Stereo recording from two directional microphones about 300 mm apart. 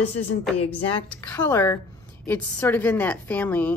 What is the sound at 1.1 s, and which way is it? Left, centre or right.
Speech, centre.